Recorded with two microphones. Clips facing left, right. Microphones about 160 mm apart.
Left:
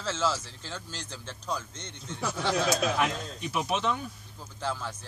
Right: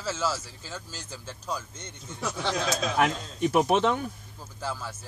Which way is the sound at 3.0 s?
50° right (ahead or behind).